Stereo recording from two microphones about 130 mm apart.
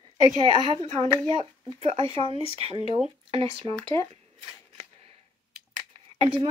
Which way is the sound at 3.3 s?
45° right (ahead or behind).